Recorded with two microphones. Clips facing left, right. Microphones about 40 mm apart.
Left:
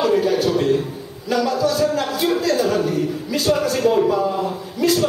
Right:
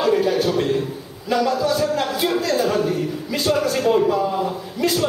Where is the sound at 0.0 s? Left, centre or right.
Centre.